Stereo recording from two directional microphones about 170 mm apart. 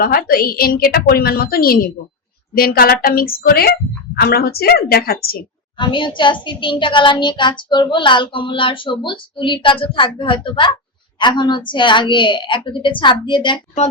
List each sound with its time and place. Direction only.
0.0 s a woman's voice: 60° left (ahead or behind)
5.7 s a woman's voice: 30° left (ahead or behind)